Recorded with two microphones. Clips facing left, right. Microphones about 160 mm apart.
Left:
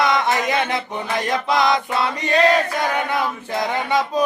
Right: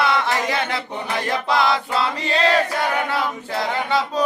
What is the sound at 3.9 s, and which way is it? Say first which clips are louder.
Chant: left 2 dB; 15° left (ahead or behind).